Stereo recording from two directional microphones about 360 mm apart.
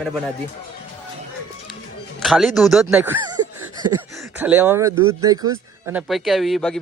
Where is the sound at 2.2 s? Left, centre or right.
Centre.